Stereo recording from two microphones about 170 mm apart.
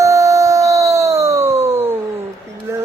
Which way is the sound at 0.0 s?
20° right (ahead or behind).